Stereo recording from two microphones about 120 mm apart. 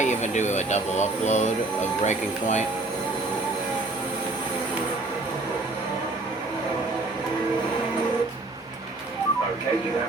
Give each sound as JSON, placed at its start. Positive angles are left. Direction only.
{"t": 0.0, "sound": "speech", "side_deg": 80}